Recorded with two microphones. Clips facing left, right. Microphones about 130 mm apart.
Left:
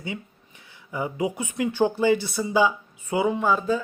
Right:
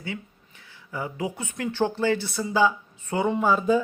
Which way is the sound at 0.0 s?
20° left (ahead or behind).